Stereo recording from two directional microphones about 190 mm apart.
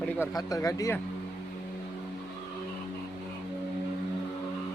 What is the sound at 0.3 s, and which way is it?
Speech, 20° left (ahead or behind).